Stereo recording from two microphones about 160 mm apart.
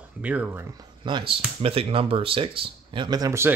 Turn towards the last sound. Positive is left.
turn(degrees=-20)  # may be behind; listen again after turning